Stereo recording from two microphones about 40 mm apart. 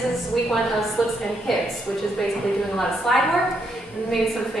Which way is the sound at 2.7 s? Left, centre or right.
Centre.